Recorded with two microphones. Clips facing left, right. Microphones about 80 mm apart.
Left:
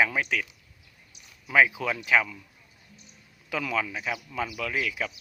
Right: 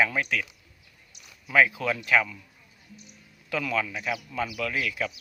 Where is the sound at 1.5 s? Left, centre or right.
Centre.